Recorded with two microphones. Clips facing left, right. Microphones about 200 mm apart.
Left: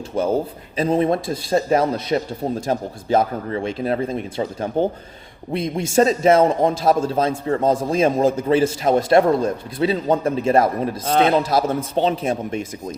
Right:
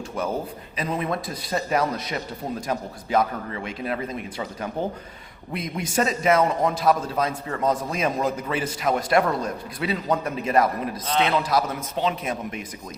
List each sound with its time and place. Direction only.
0.1 s a man's voice: 30° left (ahead or behind)
11.0 s a man's voice: 45° left (ahead or behind)
11.4 s a man's voice: 30° left (ahead or behind)